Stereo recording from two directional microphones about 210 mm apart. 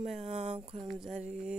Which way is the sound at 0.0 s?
30° right (ahead or behind).